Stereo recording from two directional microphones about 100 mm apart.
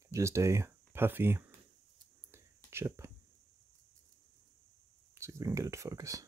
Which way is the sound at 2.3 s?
25° right (ahead or behind).